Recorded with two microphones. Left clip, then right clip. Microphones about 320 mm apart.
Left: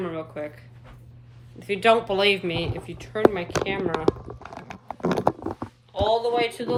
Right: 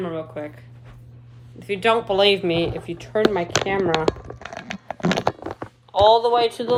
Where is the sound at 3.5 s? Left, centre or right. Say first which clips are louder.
Right 5 dB; left.